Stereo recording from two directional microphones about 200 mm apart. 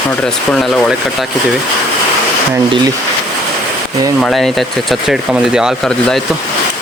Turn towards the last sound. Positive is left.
turn(degrees=-5)  # may be behind; listen again after turning